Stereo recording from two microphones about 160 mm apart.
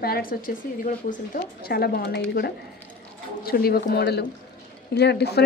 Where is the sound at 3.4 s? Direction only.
70° left (ahead or behind).